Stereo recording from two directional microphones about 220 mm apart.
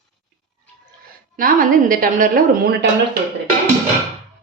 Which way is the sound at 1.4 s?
40° right (ahead or behind).